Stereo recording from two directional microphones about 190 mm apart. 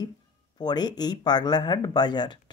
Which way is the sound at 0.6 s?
20° left (ahead or behind).